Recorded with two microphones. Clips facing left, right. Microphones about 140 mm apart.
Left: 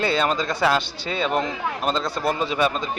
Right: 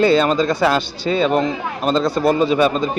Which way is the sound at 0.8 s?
35° right (ahead or behind).